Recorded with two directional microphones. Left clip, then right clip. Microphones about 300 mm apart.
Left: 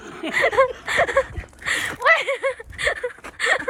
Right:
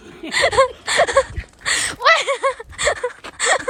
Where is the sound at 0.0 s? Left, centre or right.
Centre.